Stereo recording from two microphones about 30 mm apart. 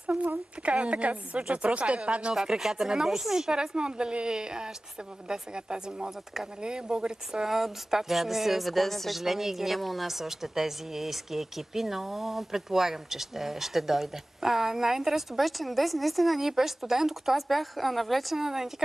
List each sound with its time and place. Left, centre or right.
0.7 s speech: right
2.6 s a woman's voice: centre
7.4 s a woman's voice: centre
9.2 s a woman's voice: centre
15.4 s a woman's voice: centre
16.3 s a woman's voice: centre
17.4 s a woman's voice: centre
18.4 s a woman's voice: centre